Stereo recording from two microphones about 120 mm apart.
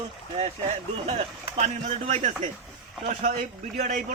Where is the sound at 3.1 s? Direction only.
85° right.